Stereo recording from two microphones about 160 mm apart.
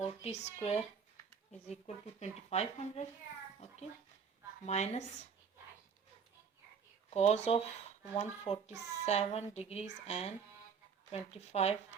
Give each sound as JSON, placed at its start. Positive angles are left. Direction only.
{"t": 0.2, "sound": "a woman's voice", "side_deg": 45}
{"t": 4.6, "sound": "a woman's voice", "side_deg": 45}
{"t": 7.1, "sound": "a child's voice", "side_deg": 40}